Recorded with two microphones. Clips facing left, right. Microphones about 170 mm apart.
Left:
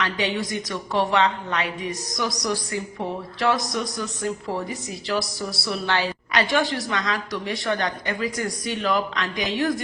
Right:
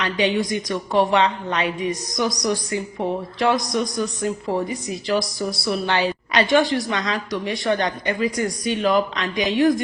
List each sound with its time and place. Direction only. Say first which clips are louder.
0.0 s speech: right 4 dB; 20° right (ahead or behind)